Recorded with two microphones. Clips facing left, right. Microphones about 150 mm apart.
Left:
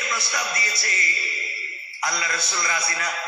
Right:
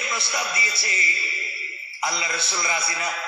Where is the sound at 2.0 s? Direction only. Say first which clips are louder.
Even; 5° right (ahead or behind).